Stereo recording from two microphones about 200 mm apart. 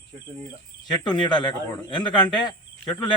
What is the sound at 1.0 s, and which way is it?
Speech, 20° left (ahead or behind).